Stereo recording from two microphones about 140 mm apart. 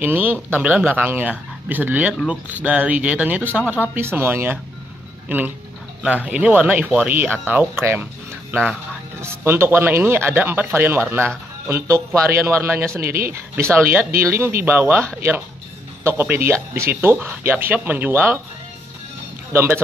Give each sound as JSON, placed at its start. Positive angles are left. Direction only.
{"t": 0.0, "sound": "speech", "side_deg": -15}
{"t": 6.0, "sound": "a man's voice", "side_deg": -10}
{"t": 19.5, "sound": "speech", "side_deg": -15}